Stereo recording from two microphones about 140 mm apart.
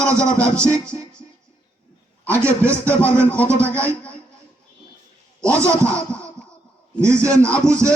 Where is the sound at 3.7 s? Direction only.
10° left (ahead or behind).